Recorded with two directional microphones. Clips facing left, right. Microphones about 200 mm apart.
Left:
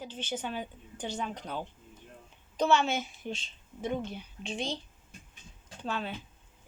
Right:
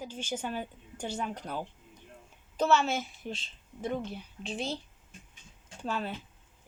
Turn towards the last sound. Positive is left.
turn(degrees=-5)  # may be behind; listen again after turning